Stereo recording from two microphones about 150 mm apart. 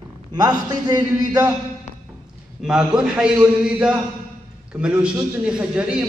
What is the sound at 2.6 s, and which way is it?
A man's voice, 5° right (ahead or behind).